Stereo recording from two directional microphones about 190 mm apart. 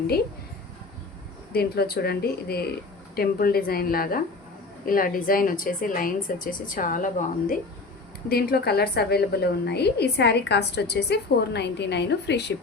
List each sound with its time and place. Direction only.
1.5 s a woman's voice: 55° left (ahead or behind)
8.3 s a woman's voice: 55° left (ahead or behind)